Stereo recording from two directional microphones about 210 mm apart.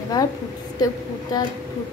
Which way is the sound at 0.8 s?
20° left (ahead or behind).